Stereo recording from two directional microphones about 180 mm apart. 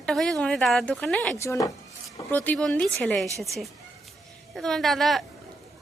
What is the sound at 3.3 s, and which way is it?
Speech, 15° right (ahead or behind).